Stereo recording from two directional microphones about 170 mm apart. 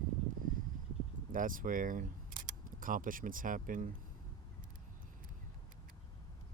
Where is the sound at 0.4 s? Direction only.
55° right (ahead or behind).